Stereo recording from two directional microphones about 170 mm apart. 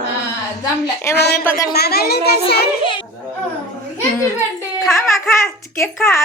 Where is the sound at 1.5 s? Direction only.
20° left (ahead or behind).